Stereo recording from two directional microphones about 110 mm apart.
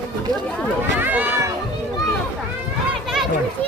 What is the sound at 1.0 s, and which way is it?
Run, 15° right (ahead or behind).